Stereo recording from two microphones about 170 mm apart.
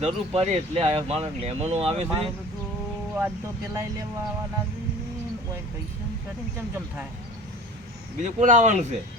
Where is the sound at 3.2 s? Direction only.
15° right (ahead or behind).